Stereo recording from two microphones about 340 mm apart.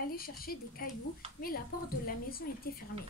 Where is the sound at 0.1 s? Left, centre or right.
Left.